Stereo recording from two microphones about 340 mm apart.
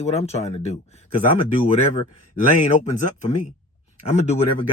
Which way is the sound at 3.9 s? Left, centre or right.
Centre.